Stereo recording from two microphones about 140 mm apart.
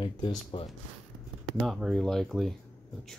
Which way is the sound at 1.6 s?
Centre (ahead or behind).